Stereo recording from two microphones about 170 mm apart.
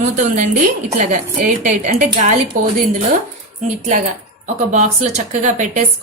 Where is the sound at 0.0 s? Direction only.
50° right (ahead or behind).